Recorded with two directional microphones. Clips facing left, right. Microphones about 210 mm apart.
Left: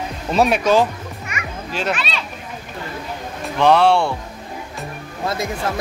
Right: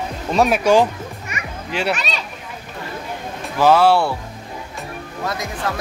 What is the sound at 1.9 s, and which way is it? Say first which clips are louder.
Speech: even; 45° right (ahead or behind).